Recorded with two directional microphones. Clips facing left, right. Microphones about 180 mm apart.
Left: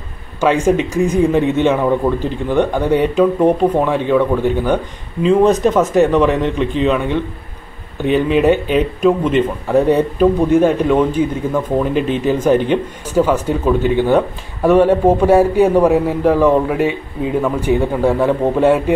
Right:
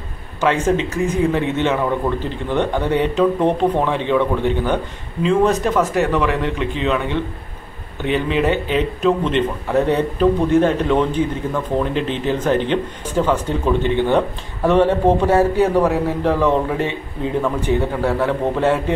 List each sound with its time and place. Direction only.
0.4 s a man's voice: 15° left (ahead or behind)
5.2 s a man's voice: 15° left (ahead or behind)